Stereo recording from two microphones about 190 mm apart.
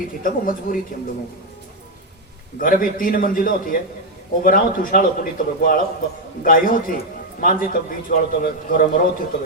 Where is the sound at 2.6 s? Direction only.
45° left (ahead or behind).